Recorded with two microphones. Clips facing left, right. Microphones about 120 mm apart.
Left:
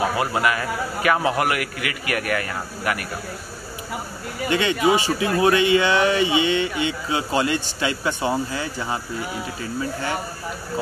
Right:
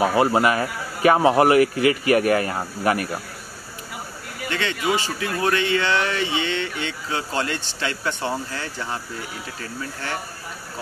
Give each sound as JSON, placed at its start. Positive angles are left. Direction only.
{"t": 0.1, "sound": "a man's voice", "side_deg": -30}
{"t": 4.5, "sound": "speech", "side_deg": 15}